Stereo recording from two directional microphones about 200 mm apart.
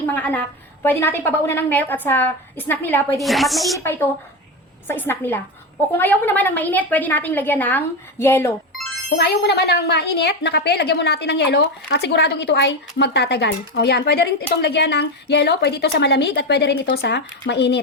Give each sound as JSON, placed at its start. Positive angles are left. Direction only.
{"t": 0.0, "sound": "a woman's voice", "side_deg": 10}
{"t": 4.9, "sound": "a woman's voice", "side_deg": 10}
{"t": 9.0, "sound": "speech", "side_deg": 55}